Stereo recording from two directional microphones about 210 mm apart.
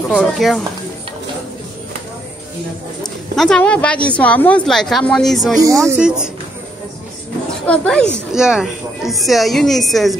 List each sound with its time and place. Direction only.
0.1 s a woman's voice: centre (ahead or behind)
3.0 s a woman's voice: 5° left (ahead or behind)
7.6 s a woman's voice: 5° left (ahead or behind)